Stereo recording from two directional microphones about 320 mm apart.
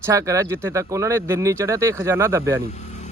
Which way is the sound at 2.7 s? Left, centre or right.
Left.